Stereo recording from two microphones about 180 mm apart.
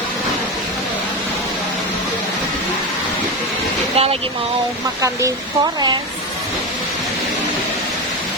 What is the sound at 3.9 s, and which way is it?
Speech, 35° right (ahead or behind).